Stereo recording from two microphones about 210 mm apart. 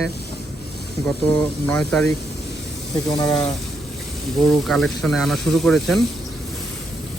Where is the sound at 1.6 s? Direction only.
5° left (ahead or behind).